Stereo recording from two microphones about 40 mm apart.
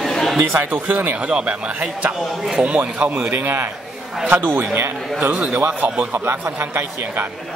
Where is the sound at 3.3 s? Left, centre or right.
Right.